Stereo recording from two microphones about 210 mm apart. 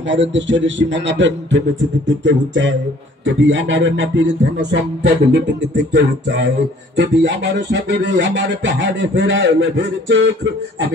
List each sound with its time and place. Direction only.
0.1 s music: 60° right (ahead or behind)